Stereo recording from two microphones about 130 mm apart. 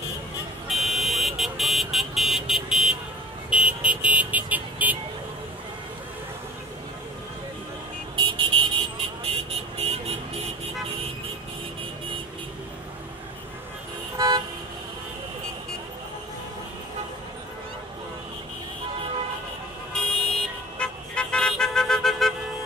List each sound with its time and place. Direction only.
0.7 s vehicle: centre (ahead or behind)
8.2 s vehicle: 40° right (ahead or behind)
14.1 s toot: 35° right (ahead or behind)
19.9 s car alarm: 5° left (ahead or behind)
20.8 s vehicle: 10° left (ahead or behind)